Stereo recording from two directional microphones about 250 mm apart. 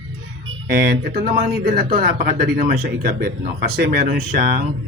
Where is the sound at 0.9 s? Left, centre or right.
Right.